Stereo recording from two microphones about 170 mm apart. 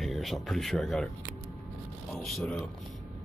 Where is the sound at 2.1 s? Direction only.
Centre (ahead or behind).